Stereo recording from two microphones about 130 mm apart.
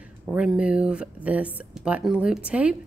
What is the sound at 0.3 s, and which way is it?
A woman's voice, 10° right (ahead or behind).